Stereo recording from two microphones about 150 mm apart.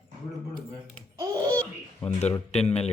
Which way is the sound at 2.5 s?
45° left (ahead or behind).